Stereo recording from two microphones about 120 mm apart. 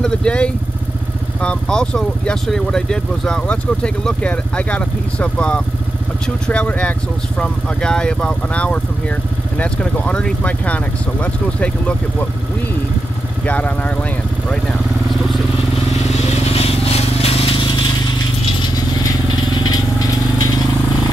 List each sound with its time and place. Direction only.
0.0 s vehicle: 10° left (ahead or behind)
1.4 s speech: 10° left (ahead or behind)
13.5 s speech: 10° left (ahead or behind)
16.1 s vehicle: 55° left (ahead or behind)
19.6 s vehicle: 35° left (ahead or behind)